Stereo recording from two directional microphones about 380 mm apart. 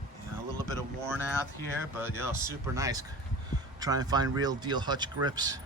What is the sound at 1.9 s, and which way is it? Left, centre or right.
Speech, centre.